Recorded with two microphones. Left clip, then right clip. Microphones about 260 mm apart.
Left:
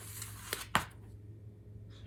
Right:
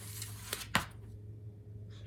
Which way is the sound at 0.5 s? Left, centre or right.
Left.